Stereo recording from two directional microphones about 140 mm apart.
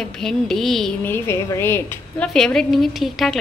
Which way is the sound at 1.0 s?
15° left (ahead or behind).